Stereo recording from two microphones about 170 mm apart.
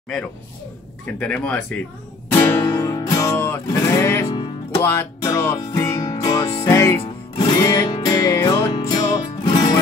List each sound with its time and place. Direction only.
1.2 s speech: 5° left (ahead or behind)
2.3 s music: 15° left (ahead or behind)